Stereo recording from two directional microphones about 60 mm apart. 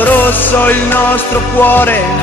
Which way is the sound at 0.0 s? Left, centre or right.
Left.